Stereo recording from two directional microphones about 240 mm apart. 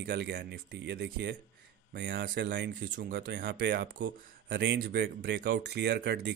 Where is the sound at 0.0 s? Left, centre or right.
Right.